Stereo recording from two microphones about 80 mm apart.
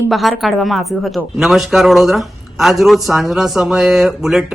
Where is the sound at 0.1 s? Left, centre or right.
Centre.